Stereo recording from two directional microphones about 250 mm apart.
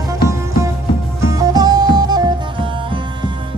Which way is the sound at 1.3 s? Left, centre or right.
Centre.